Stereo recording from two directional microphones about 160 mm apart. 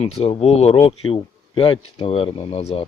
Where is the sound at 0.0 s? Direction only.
35° left (ahead or behind).